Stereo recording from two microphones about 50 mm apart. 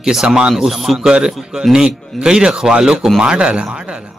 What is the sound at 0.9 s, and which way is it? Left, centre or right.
A man's voice, centre.